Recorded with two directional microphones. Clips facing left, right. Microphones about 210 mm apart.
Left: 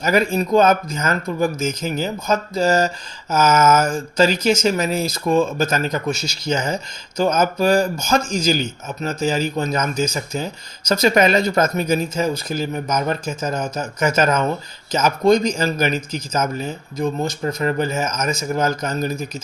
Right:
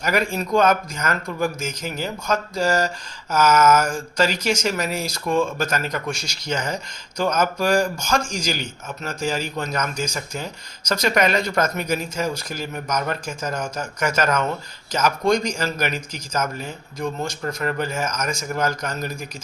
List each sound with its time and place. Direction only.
0.0 s speech: 25° left (ahead or behind)